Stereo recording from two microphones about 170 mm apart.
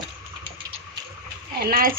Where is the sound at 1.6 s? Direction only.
60° right (ahead or behind).